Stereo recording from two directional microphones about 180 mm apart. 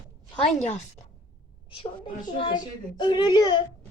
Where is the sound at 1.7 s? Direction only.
25° left (ahead or behind).